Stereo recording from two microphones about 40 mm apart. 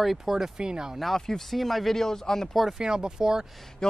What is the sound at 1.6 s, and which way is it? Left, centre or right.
Speech, centre.